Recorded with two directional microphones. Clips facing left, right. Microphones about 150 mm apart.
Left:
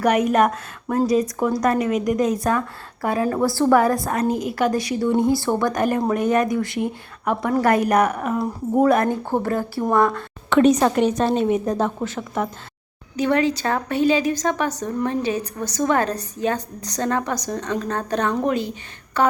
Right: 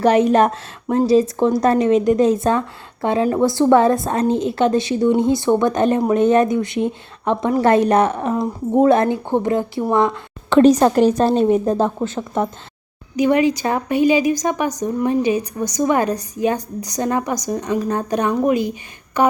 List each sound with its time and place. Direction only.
0.0 s speech: 30° right (ahead or behind)
10.6 s a woman's voice: 30° right (ahead or behind)
13.1 s a woman's voice: 15° right (ahead or behind)